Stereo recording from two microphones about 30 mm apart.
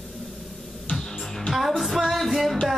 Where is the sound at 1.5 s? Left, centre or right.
Centre.